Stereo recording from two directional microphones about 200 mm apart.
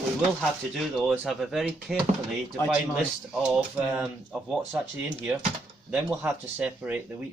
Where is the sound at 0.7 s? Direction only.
Centre (ahead or behind).